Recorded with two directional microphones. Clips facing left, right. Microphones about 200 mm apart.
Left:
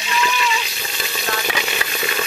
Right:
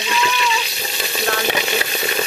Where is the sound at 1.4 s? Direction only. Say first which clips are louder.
Right 4 dB; 30° right (ahead or behind).